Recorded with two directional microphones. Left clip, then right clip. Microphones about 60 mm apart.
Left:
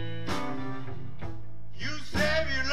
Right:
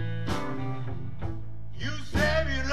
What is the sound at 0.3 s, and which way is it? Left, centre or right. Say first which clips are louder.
Music: right 1 dB; left.